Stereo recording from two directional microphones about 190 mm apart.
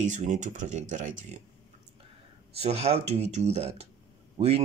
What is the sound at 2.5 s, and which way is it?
Speech, 30° right (ahead or behind).